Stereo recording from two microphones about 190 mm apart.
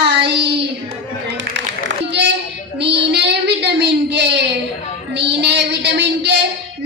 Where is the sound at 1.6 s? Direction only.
65° right (ahead or behind).